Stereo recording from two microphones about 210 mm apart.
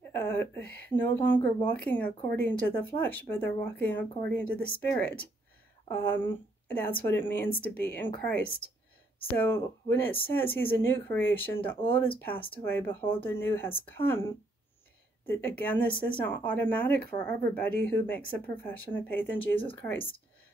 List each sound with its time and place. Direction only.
0.1 s speech: 10° left (ahead or behind)
15.2 s speech: 10° left (ahead or behind)
17.1 s speech: 20° left (ahead or behind)
17.6 s speech: 10° left (ahead or behind)